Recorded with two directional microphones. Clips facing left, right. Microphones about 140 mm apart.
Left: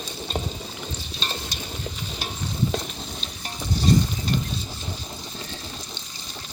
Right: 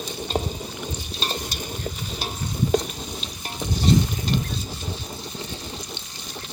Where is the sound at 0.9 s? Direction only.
10° right (ahead or behind).